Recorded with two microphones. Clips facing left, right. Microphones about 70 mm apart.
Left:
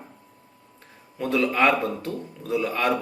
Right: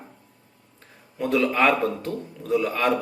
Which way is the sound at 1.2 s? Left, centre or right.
Centre.